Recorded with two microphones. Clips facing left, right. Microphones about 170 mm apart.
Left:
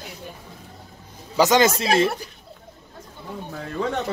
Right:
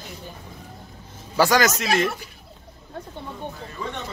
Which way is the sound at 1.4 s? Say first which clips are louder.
Left 2 dB; 20° left (ahead or behind).